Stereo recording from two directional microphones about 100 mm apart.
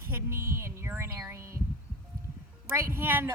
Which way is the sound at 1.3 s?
30° right (ahead or behind).